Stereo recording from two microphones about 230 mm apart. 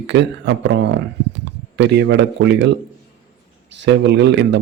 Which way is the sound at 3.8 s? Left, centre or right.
Right.